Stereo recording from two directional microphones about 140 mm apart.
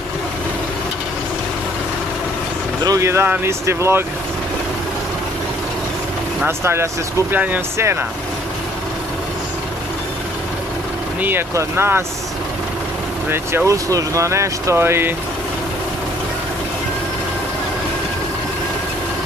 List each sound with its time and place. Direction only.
2.8 s speech: 25° right (ahead or behind)
6.4 s speech: 20° right (ahead or behind)
11.1 s speech: 15° right (ahead or behind)
13.3 s speech: 15° right (ahead or behind)